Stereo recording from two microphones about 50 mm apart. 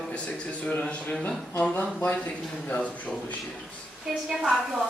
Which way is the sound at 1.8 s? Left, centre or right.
Left.